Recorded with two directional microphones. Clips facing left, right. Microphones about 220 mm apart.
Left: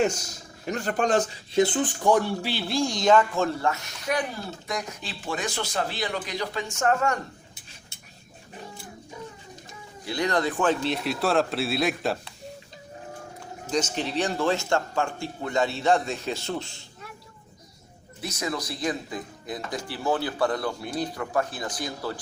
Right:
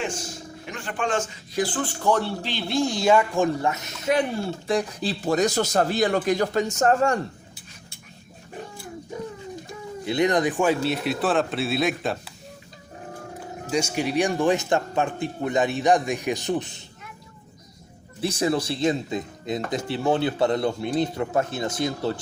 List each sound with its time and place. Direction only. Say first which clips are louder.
0.0 s speech: left 5 dB; 40° left (ahead or behind)
1.6 s speech: right 2 dB; 20° left (ahead or behind); by 7.2 s 30° right (ahead or behind)
10.1 s a man's voice: right 4 dB; 20° right (ahead or behind); by 12.3 s centre (ahead or behind)
13.7 s speech: right 3 dB; 10° right (ahead or behind)
18.2 s speech: right 8 dB; 30° right (ahead or behind)